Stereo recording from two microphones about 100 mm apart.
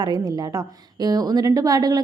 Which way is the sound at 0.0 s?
40° right (ahead or behind).